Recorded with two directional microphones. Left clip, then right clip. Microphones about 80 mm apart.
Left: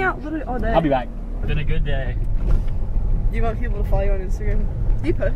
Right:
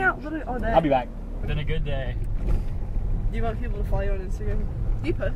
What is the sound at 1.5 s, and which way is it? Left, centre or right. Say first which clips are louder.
Speech: left 3 dB; centre.